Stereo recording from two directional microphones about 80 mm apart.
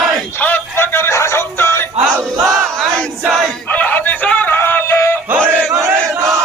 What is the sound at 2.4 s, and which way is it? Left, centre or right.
Battle cry, centre.